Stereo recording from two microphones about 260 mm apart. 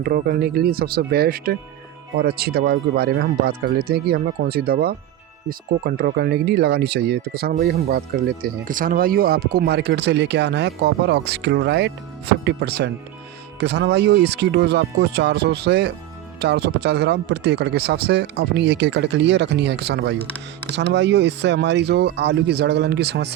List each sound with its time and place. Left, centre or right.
0.0 s speech: right